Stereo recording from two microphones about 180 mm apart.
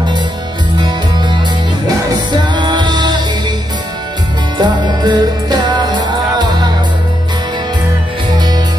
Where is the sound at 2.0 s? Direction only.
25° right (ahead or behind).